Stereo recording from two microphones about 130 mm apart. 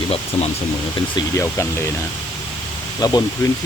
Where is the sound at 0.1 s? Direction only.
50° left (ahead or behind).